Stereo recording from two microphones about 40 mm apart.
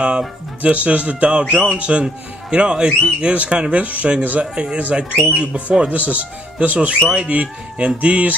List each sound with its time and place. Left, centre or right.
0.6 s speech: right
1.5 s speech: right
3.8 s speech: right